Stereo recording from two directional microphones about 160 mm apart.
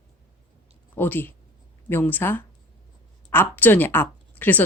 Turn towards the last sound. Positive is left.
turn(degrees=10)  # may be behind; listen again after turning